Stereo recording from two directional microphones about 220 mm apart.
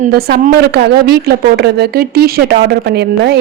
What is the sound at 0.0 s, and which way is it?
A woman's voice, 45° right (ahead or behind).